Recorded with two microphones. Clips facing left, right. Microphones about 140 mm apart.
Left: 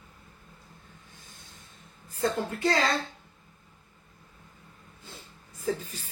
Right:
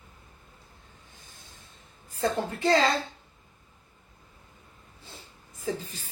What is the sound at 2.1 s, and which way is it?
Speech, 25° right (ahead or behind).